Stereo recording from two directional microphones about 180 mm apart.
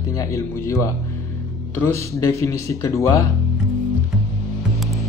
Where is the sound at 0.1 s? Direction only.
15° left (ahead or behind).